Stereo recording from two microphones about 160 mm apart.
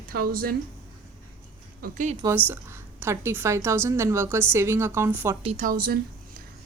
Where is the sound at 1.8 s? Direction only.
70° right (ahead or behind).